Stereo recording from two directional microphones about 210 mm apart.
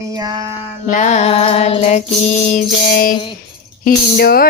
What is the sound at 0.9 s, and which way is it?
Music, 35° left (ahead or behind).